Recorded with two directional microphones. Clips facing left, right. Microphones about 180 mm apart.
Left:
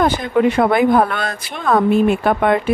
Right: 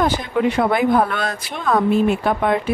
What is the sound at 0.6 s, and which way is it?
Speech, 55° left (ahead or behind).